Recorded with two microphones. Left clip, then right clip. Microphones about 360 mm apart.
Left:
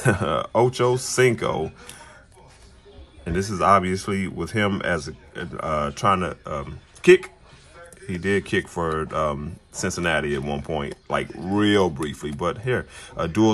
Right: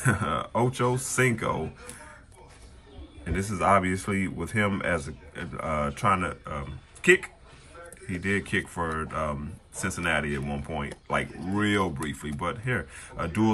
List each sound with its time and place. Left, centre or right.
0.0 s speech: centre
3.3 s speech: centre
8.1 s speech: centre